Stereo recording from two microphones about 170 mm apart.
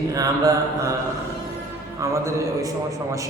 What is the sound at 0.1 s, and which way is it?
Mantra, 20° right (ahead or behind).